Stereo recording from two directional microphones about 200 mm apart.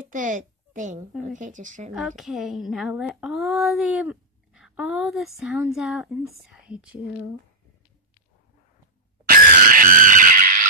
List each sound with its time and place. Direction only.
0.1 s a child's voice: 40° right (ahead or behind)
2.0 s speech: centre (ahead or behind)
9.2 s screaming: 45° right (ahead or behind)